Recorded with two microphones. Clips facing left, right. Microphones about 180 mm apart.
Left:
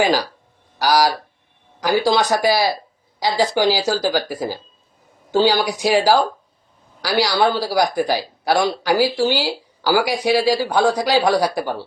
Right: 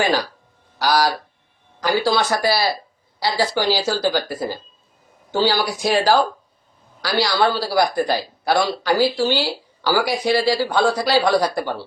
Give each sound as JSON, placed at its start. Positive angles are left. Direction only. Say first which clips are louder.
{"t": 0.8, "sound": "speech", "louder": "left 2 dB", "side_deg": 10}